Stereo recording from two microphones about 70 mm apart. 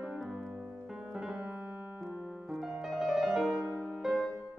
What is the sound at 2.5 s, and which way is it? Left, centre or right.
Music, centre.